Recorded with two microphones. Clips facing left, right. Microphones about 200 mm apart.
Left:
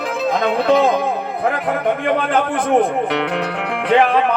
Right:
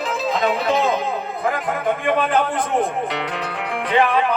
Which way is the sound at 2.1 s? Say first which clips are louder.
Left 1 dB; 60° left (ahead or behind).